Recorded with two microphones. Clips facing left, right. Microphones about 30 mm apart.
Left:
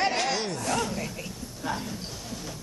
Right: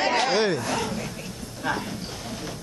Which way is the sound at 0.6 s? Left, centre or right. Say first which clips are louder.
Right 1 dB; centre.